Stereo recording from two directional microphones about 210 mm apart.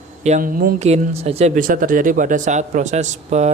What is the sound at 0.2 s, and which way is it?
Speech, 35° right (ahead or behind).